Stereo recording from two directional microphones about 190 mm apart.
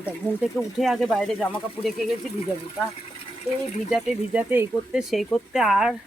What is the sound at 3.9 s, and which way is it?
Speech, 5° right (ahead or behind).